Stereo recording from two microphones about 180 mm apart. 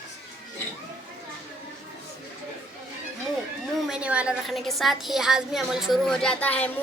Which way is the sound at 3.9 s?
5° right (ahead or behind).